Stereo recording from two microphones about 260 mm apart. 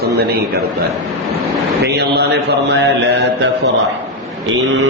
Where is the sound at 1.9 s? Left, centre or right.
Right.